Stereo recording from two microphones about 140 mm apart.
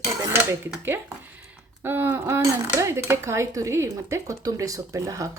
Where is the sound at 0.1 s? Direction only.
20° right (ahead or behind).